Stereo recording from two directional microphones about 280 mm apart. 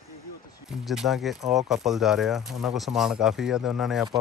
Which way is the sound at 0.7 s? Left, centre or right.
Centre.